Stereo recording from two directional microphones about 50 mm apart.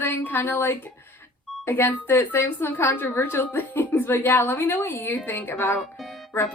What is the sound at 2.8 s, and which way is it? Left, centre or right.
Speech, left.